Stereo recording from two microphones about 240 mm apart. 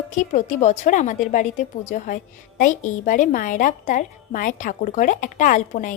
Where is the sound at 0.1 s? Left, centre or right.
Left.